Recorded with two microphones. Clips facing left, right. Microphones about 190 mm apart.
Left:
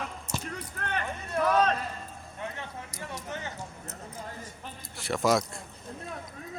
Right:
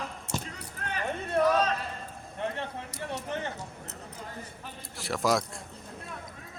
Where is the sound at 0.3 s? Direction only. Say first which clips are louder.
Right 3 dB; 65° right (ahead or behind).